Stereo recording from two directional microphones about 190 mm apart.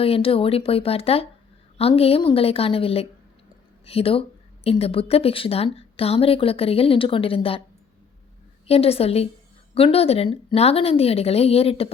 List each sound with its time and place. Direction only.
0.0 s speech: 30° left (ahead or behind)
8.6 s speech: 30° left (ahead or behind)